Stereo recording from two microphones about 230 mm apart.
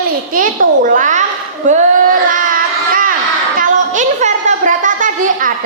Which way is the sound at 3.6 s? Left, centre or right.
Right.